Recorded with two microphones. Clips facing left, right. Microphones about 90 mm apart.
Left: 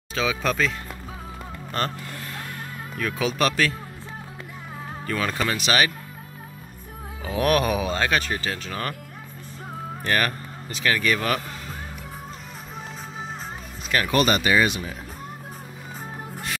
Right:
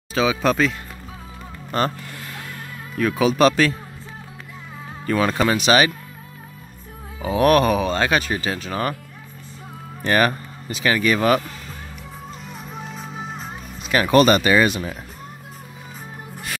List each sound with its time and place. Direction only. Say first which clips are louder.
0.1 s speech: right 6 dB; 5° right (ahead or behind)
3.0 s speech: right 7 dB; 5° right (ahead or behind)
3.3 s a man's voice: right 6 dB; 25° right (ahead or behind)
5.0 s a man's voice: right 7 dB; 25° right (ahead or behind)
7.2 s speech: right 6 dB; 5° right (ahead or behind)
8.0 s speech: right 3 dB; 10° right (ahead or behind)
10.0 s speech: right 6 dB; 20° right (ahead or behind)
14.0 s speech: right 7 dB; 40° right (ahead or behind)